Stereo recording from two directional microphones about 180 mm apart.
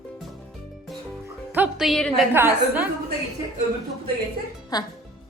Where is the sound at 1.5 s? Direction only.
5° right (ahead or behind).